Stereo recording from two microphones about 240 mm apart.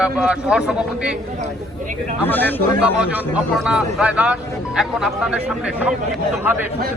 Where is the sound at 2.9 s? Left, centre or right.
Centre.